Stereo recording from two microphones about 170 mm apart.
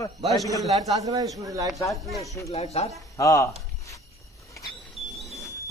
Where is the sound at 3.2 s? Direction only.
20° left (ahead or behind).